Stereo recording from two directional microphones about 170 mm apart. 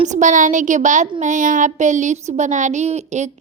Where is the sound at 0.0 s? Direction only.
45° right (ahead or behind).